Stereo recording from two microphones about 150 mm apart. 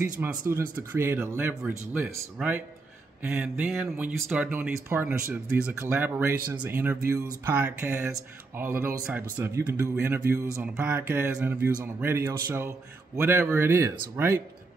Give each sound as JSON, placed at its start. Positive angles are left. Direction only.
{"t": 0.0, "sound": "speech", "side_deg": -15}